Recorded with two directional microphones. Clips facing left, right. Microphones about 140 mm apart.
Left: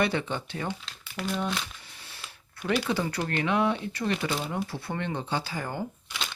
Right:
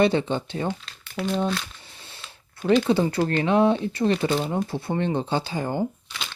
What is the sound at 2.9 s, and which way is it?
Speech, 25° right (ahead or behind).